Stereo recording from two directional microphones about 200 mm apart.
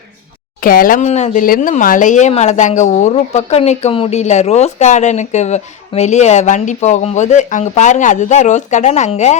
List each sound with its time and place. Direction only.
0.6 s speech: 45° left (ahead or behind)